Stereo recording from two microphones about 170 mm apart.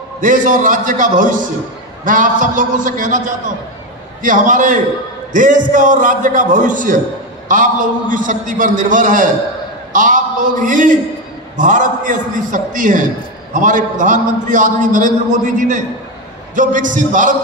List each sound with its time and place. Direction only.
0.2 s a man's voice: 50° right (ahead or behind)